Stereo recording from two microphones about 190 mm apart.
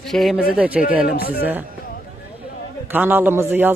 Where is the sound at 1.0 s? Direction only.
50° left (ahead or behind).